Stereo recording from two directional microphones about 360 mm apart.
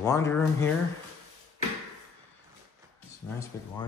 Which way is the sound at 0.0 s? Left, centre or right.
Centre.